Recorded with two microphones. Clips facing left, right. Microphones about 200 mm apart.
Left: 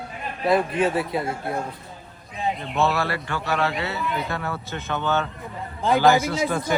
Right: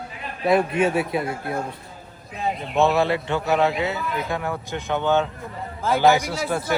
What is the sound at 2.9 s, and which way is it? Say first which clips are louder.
Speech: right 5 dB; 20° right (ahead or behind).